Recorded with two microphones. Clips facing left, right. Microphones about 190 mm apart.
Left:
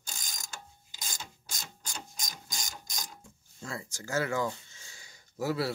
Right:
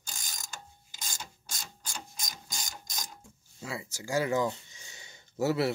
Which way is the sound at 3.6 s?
5° right (ahead or behind).